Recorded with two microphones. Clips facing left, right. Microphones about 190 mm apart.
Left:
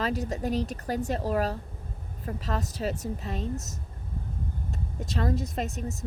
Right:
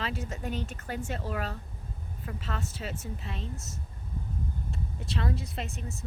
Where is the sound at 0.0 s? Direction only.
40° left (ahead or behind).